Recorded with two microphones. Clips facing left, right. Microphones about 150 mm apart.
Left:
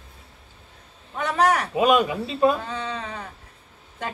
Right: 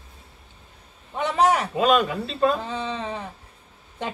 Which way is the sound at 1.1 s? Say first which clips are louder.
Right 1 dB; 20° right (ahead or behind).